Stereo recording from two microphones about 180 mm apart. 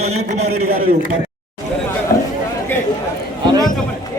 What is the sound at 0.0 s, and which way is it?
Speech, 35° right (ahead or behind).